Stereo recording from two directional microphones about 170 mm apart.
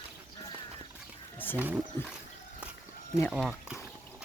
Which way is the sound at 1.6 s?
10° right (ahead or behind).